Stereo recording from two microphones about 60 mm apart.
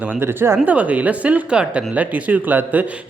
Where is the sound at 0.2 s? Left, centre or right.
Right.